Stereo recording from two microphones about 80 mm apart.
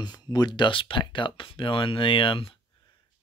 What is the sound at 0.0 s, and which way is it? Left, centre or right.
Speech, left.